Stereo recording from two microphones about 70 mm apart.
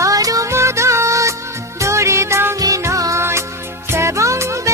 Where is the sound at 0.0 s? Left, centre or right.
Right.